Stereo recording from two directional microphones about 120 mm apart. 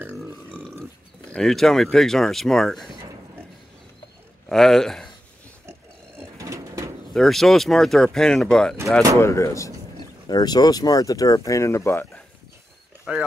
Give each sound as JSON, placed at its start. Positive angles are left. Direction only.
{"t": 1.3, "sound": "speech", "side_deg": 5}
{"t": 4.5, "sound": "speech", "side_deg": 5}
{"t": 5.7, "sound": "a sound", "side_deg": -25}
{"t": 7.2, "sound": "speech", "side_deg": 0}
{"t": 9.2, "sound": "speech", "side_deg": 25}
{"t": 13.1, "sound": "speech", "side_deg": -5}